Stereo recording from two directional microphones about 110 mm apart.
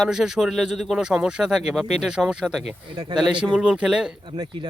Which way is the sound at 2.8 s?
45° right (ahead or behind).